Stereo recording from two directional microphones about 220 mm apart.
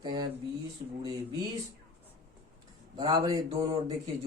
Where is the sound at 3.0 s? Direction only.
20° right (ahead or behind).